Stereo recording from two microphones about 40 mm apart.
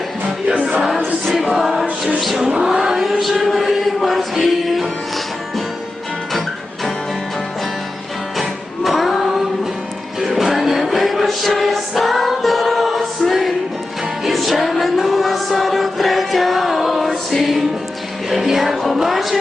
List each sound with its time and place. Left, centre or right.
0.4 s music: right
0.9 s choir: centre
1.6 s chant: centre
2.2 s vehicle: centre
3.0 s chant: centre
8.4 s music: centre
18.9 s a sound: centre